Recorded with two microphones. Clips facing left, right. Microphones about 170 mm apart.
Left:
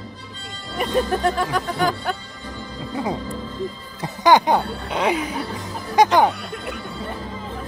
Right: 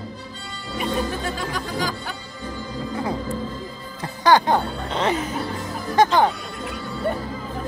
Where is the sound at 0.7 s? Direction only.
60° left (ahead or behind).